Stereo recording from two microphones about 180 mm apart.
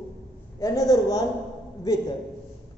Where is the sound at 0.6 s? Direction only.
20° left (ahead or behind).